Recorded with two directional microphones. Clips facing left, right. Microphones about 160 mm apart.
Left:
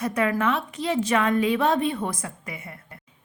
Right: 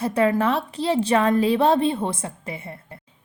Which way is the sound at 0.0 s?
30° right (ahead or behind).